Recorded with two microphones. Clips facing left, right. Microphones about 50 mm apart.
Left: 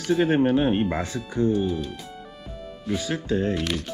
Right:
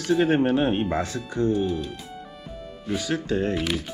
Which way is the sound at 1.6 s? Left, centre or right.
Centre.